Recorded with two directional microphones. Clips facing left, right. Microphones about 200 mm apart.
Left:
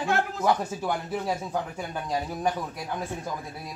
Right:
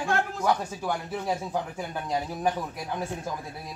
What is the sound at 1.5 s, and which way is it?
Speech, 10° right (ahead or behind).